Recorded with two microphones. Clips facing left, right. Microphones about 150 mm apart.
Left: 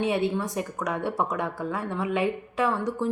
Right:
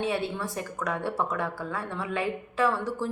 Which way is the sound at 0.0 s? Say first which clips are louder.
Left 4 dB; 20° left (ahead or behind).